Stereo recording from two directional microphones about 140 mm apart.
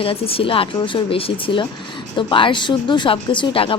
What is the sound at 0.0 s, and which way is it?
A woman's voice, 40° left (ahead or behind).